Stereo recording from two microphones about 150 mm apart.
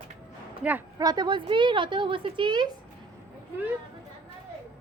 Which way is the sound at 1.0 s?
25° right (ahead or behind).